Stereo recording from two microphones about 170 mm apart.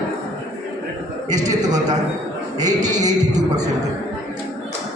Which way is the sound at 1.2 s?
20° right (ahead or behind).